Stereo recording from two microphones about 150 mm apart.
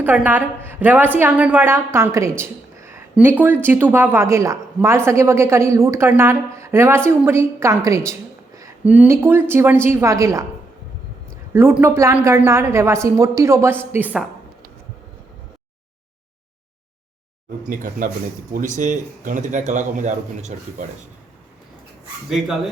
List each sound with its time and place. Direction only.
0.0 s speech: 10° right (ahead or behind)
8.8 s speech: 10° right (ahead or behind)
11.5 s a woman's voice: 15° right (ahead or behind)
18.5 s a man's voice: 60° right (ahead or behind)